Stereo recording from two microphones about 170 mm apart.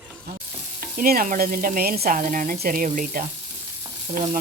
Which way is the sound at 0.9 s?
55° right (ahead or behind).